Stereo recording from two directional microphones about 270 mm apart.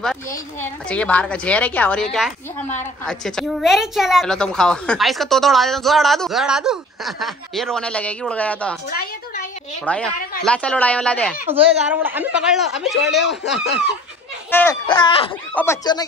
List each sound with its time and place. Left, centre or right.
0.0 s a woman's voice: centre
9.9 s a woman's voice: centre
11.9 s a woman's voice: centre
14.5 s speech: centre